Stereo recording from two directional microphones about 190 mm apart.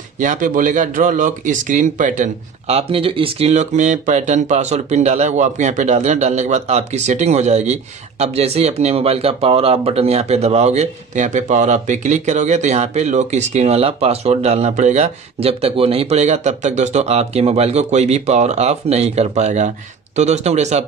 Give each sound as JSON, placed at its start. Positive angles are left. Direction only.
{"t": 0.2, "sound": "speech", "side_deg": -45}